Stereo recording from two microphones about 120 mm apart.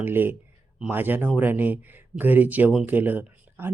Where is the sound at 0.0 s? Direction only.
15° right (ahead or behind).